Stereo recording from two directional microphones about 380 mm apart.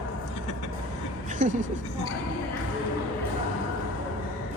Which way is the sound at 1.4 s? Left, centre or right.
Centre.